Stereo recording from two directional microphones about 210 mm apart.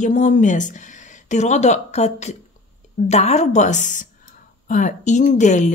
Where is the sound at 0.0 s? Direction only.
35° left (ahead or behind).